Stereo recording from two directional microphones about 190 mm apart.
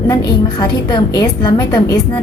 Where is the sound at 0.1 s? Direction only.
20° left (ahead or behind).